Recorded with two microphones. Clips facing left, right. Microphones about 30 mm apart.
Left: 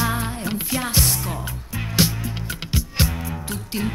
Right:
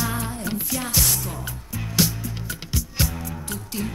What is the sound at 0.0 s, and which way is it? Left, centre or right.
Music, left.